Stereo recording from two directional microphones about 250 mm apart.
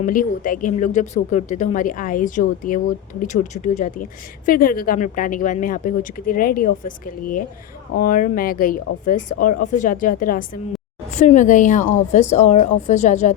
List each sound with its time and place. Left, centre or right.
0.0 s a woman's voice: left